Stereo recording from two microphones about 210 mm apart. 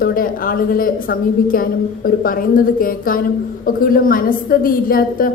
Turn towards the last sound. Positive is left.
turn(degrees=45)  # may be behind; listen again after turning